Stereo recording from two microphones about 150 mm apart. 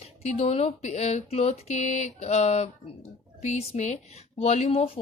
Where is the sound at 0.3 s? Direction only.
40° left (ahead or behind).